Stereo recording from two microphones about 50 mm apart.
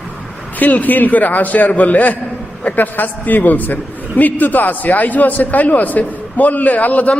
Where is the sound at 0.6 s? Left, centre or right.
Left.